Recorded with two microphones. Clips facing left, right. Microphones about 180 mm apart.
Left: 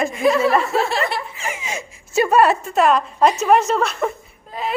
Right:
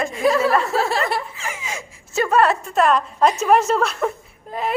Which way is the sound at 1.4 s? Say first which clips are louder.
Left 3 dB; 20° left (ahead or behind).